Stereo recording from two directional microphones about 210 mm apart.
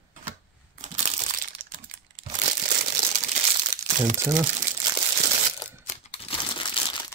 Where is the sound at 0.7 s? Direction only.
35° right (ahead or behind).